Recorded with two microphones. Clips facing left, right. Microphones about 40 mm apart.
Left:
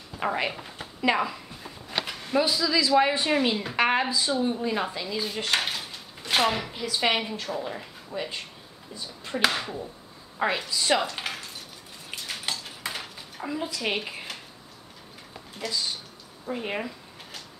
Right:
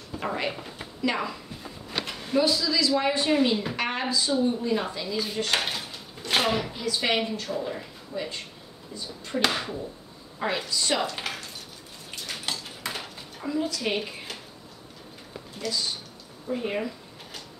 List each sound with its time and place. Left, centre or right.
0.2 s speech: centre
0.5 s a woman's voice: centre
2.0 s a sound: centre
2.4 s a woman's voice: centre
3.7 s a woman's voice: left
4.0 s a woman's voice: centre
4.4 s a woman's voice: left
5.5 s a sound: centre
6.7 s a woman's voice: centre
12.2 s dishes: centre
13.4 s a woman's voice: centre
15.6 s a woman's voice: centre